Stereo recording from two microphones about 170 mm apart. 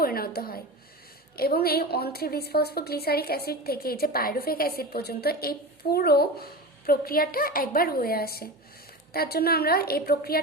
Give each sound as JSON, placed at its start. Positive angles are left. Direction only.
{"t": 0.0, "sound": "a woman's voice", "side_deg": 60}